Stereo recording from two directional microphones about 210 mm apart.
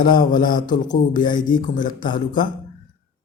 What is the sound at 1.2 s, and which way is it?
Speech, 20° left (ahead or behind).